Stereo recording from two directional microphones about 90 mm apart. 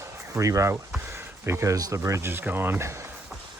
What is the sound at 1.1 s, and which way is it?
Speech, 30° right (ahead or behind).